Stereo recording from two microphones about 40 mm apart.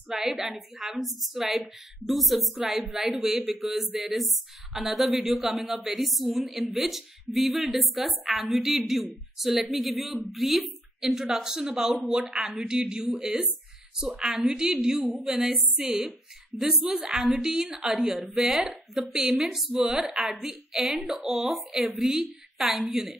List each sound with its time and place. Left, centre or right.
0.1 s a woman's voice: centre
15.4 s a woman's voice: centre